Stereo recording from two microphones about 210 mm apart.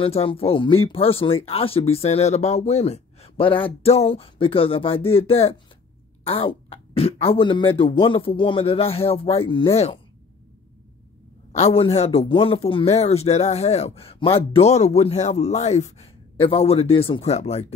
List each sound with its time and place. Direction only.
0.0 s a man's voice: 25° left (ahead or behind)
11.5 s a man's voice: 30° left (ahead or behind)